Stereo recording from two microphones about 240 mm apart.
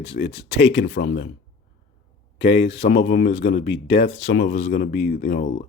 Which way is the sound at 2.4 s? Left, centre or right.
Left.